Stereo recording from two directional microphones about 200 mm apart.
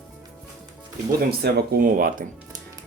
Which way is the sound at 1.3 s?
50° right (ahead or behind).